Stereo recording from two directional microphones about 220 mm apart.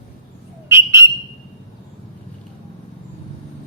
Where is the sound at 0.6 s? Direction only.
10° right (ahead or behind).